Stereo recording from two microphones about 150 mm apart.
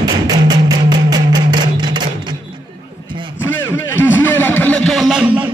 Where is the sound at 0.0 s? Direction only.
25° right (ahead or behind).